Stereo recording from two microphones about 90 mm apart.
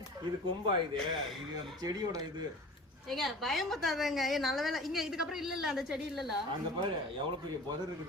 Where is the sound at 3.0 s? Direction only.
Centre (ahead or behind).